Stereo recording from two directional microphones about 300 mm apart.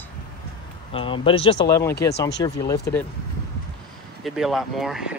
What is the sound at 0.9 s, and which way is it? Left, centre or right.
Speech, centre.